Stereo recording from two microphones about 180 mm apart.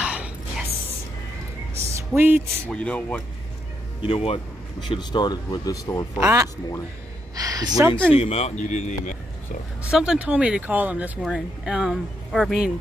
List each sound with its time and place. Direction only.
0.0 s a sound: 5° right (ahead or behind)
2.0 s speech: 10° right (ahead or behind)
2.7 s speech: 5° left (ahead or behind)
4.0 s speech: 30° left (ahead or behind)
6.1 s speech: 15° right (ahead or behind)
7.3 s a sound: 20° right (ahead or behind)
8.1 s speech: 35° left (ahead or behind)
9.8 s speech: 5° right (ahead or behind)